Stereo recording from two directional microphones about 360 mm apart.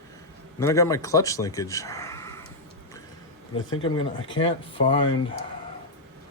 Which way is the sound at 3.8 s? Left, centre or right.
Centre.